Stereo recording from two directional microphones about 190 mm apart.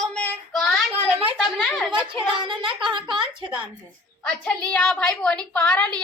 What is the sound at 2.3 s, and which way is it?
A child's voice, 25° right (ahead or behind).